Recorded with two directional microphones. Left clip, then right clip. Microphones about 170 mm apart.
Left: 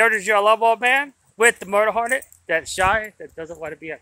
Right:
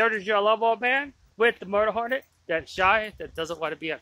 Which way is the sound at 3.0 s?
10° right (ahead or behind).